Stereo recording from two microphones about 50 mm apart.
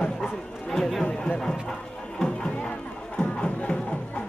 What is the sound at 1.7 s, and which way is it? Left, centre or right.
Music, centre.